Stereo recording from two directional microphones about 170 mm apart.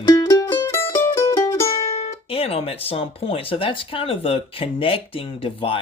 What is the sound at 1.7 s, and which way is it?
Speech, 35° left (ahead or behind).